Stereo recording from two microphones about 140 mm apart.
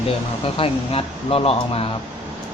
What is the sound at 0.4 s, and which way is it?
Speech, 40° left (ahead or behind).